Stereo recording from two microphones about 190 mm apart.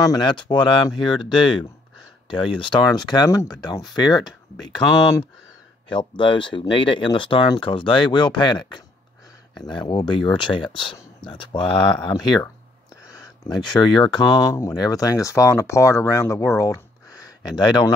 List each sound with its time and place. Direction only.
0.0 s speech: 20° left (ahead or behind)
5.9 s speech: 25° left (ahead or behind)